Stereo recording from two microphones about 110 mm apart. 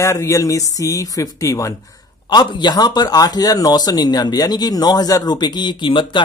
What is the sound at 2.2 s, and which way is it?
Speech, 45° left (ahead or behind).